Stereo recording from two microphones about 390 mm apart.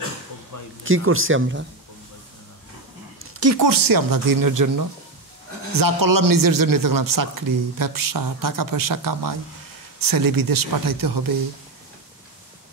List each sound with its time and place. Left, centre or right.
0.8 s speech: right
3.2 s a sound: right
3.5 s speech: right